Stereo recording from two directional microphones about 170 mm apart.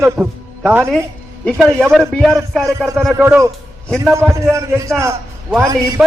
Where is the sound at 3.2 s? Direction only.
15° right (ahead or behind).